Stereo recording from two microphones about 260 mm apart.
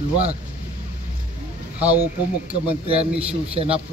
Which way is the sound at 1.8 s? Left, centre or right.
Centre.